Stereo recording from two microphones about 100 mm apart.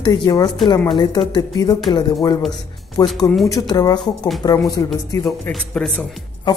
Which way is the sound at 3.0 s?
40° left (ahead or behind).